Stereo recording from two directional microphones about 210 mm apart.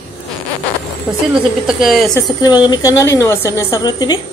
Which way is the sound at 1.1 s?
5° right (ahead or behind).